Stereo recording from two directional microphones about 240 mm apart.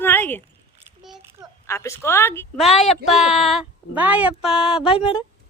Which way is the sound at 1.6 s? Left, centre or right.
Centre.